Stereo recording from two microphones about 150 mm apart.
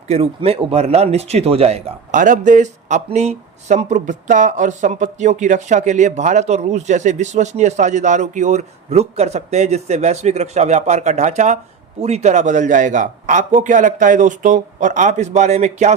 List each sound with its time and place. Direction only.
0.1 s speech: 40° right (ahead or behind)
2.1 s a man's voice: 60° right (ahead or behind)